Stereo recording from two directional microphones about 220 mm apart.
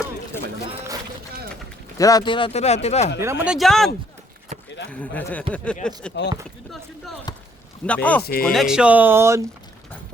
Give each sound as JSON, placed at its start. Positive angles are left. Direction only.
{"t": 2.0, "sound": "speech", "side_deg": 15}
{"t": 3.2, "sound": "speech", "side_deg": -10}
{"t": 8.2, "sound": "speech", "side_deg": 45}
{"t": 8.5, "sound": "speech", "side_deg": -5}